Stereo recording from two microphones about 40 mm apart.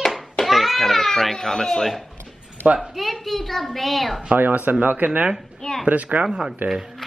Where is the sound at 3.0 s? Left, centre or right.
Centre.